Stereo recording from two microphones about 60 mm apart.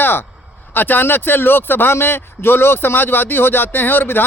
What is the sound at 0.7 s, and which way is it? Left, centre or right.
Speech, left.